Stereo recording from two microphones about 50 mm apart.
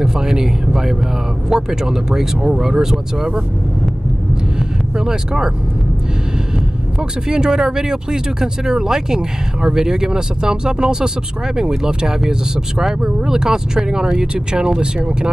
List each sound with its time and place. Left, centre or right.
0.0 s speech: centre
4.9 s speech: centre
7.0 s speech: centre